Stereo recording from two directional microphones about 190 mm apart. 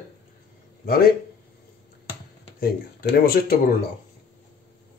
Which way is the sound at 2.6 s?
50° left (ahead or behind).